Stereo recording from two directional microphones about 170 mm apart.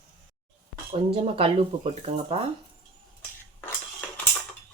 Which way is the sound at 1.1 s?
35° right (ahead or behind).